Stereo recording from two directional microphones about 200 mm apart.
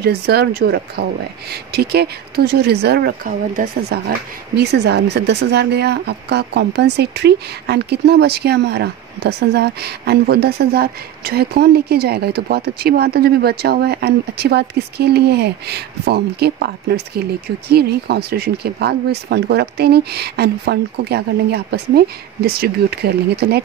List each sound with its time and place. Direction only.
0.0 s speech: 50° right (ahead or behind)
3.9 s speech: 55° right (ahead or behind)